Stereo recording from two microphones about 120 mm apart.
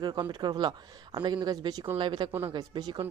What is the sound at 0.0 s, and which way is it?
Speech, 35° right (ahead or behind).